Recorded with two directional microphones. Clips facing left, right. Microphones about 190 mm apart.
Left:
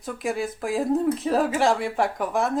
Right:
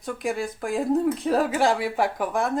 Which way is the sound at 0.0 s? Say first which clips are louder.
Even; centre (ahead or behind).